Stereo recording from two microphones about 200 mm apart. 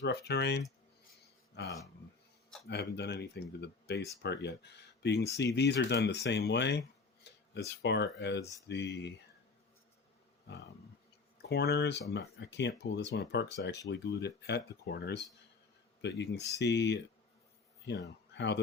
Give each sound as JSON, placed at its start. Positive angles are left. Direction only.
{"t": 0.0, "sound": "speech", "side_deg": 55}
{"t": 11.4, "sound": "speech", "side_deg": 55}